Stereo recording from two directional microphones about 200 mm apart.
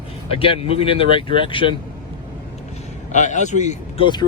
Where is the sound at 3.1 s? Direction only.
35° left (ahead or behind).